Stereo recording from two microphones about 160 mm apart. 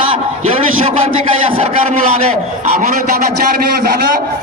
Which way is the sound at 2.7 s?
65° right (ahead or behind).